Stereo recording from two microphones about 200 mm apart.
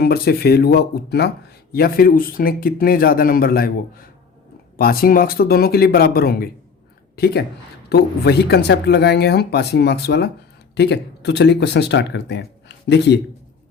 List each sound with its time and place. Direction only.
0.0 s speech: 50° left (ahead or behind)